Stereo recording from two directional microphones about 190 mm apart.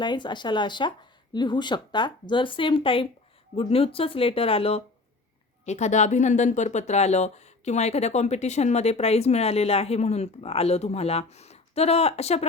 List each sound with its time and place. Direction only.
0.0 s speech: 25° left (ahead or behind)